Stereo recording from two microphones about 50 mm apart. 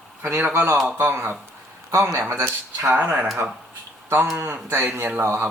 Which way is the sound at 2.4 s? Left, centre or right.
Right.